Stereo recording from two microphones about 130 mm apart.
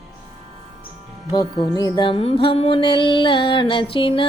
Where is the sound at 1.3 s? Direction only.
30° left (ahead or behind).